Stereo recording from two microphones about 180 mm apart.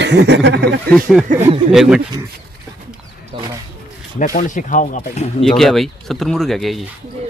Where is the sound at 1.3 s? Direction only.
45° right (ahead or behind).